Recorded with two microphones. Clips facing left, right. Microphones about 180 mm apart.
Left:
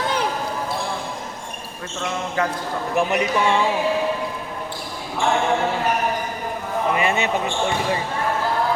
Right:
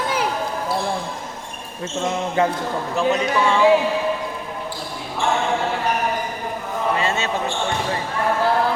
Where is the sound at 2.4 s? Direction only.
25° right (ahead or behind).